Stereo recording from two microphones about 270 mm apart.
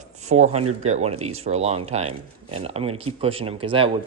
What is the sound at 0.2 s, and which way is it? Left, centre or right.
Speech, right.